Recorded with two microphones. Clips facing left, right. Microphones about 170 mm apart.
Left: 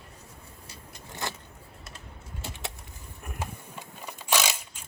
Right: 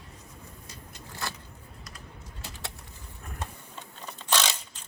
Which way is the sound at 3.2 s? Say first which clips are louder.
Left 3 dB; 15° left (ahead or behind).